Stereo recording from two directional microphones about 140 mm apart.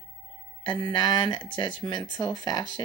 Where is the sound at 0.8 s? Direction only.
30° left (ahead or behind).